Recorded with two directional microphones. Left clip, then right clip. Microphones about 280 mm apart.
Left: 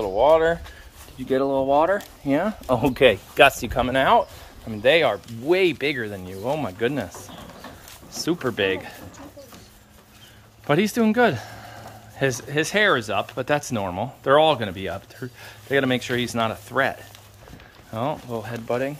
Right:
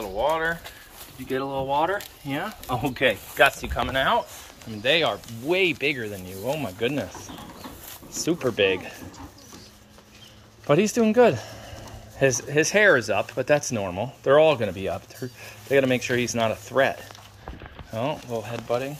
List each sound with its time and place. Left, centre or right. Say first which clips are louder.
0.0 s speech: left 7 dB; left
4.8 s speech: left 4 dB; centre
7.1 s speech: even; left
8.1 s speech: even; centre
10.7 s speech: even; centre
17.9 s speech: left 1 dB; centre